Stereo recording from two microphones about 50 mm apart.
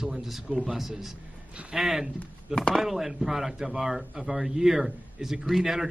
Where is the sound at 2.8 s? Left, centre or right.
Centre.